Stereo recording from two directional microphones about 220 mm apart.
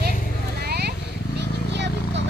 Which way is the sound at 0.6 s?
45° right (ahead or behind).